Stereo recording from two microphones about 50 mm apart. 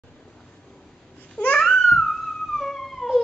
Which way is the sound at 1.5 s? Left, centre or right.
Centre.